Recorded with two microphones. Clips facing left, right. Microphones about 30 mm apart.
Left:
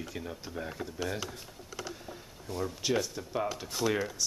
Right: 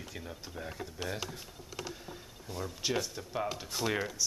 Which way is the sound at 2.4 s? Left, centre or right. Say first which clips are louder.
Left 3 dB; centre.